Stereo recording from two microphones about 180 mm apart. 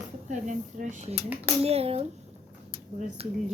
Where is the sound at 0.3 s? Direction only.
45° right (ahead or behind).